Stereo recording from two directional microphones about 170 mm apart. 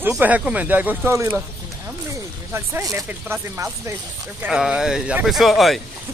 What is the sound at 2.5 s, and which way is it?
Speech, 15° right (ahead or behind).